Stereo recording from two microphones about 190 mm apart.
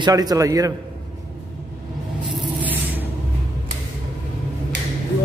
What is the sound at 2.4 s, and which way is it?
Spray, 10° right (ahead or behind).